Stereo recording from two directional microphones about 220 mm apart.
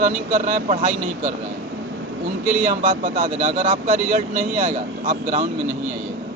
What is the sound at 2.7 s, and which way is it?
Speech, 35° right (ahead or behind).